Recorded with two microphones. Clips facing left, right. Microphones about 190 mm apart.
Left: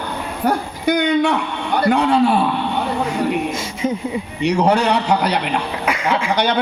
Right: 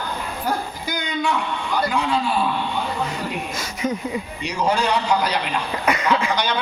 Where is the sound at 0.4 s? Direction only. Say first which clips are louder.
Left 9 dB; 65° left (ahead or behind).